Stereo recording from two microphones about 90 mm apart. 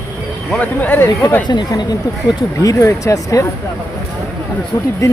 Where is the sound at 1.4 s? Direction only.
55° left (ahead or behind).